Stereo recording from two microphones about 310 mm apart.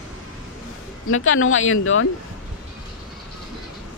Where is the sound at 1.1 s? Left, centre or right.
Left.